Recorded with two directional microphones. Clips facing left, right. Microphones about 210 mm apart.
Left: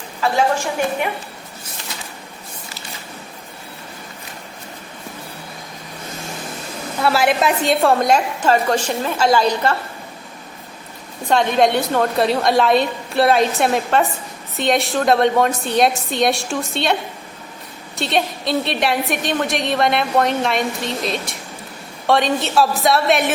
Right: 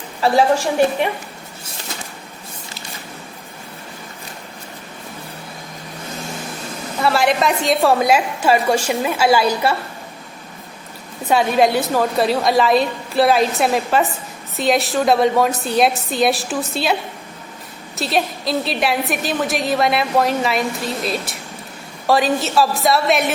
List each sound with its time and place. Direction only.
0.2 s a woman's voice: 35° right (ahead or behind)
7.0 s a woman's voice: centre (ahead or behind)
11.3 s a woman's voice: 5° right (ahead or behind)